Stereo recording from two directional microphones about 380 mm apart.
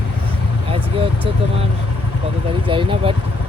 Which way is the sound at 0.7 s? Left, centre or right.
Centre.